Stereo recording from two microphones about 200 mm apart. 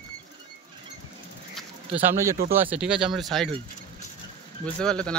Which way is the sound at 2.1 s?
15° right (ahead or behind).